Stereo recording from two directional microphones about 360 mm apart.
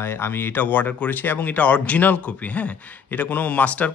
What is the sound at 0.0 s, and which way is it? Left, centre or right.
Speech, centre.